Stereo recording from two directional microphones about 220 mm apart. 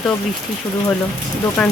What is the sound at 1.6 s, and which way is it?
Speech, 5° left (ahead or behind).